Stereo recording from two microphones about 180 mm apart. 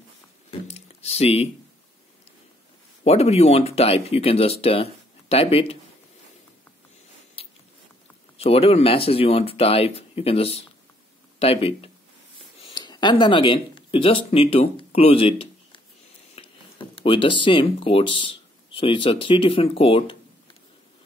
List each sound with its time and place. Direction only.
0.5 s a sound: 35° left (ahead or behind)
3.0 s speech: 35° left (ahead or behind)
7.4 s biting: 35° left (ahead or behind)
8.4 s speech: 35° left (ahead or behind)